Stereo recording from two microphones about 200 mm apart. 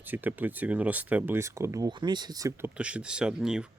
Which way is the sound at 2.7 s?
5° right (ahead or behind).